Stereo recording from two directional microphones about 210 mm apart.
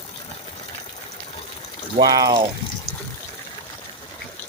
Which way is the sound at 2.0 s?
20° right (ahead or behind).